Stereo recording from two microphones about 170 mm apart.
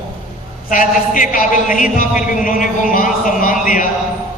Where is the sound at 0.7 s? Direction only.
50° left (ahead or behind).